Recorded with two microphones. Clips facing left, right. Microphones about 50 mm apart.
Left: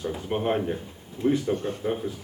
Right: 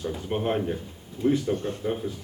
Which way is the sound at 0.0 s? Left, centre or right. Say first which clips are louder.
Left 1 dB; centre.